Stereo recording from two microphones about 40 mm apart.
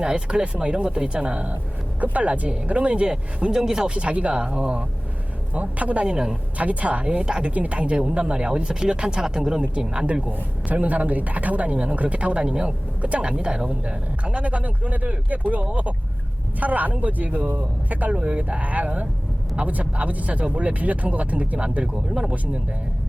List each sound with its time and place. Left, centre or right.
0.0 s speech: right
3.5 s speech: centre
3.9 s speech: right
5.5 s speech: right
7.1 s speech: right
7.5 s speech: right
10.2 s speech: right; by 13.7 s centre
13.8 s speech: right